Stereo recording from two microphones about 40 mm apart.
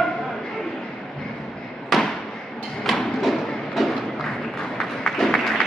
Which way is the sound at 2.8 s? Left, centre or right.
Centre.